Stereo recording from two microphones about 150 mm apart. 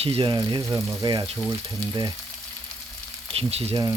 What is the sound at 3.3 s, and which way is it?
Speech, 40° right (ahead or behind).